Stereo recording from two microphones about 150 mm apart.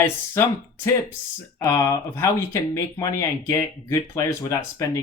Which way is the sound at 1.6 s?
25° left (ahead or behind).